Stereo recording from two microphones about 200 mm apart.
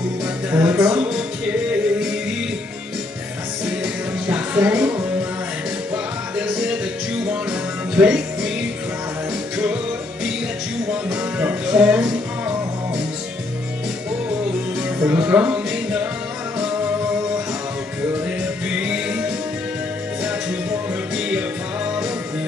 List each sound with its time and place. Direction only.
0.5 s speech: 10° right (ahead or behind)
3.6 s music: 5° right (ahead or behind)
7.9 s music: 5° right (ahead or behind)
11.1 s music: 5° right (ahead or behind)
15.0 s music: 10° right (ahead or behind)
18.7 s music: 5° right (ahead or behind)
21.2 s music: 5° right (ahead or behind)